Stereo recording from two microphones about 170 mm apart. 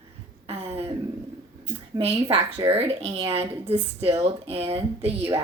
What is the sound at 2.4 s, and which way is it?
Speech, 20° right (ahead or behind).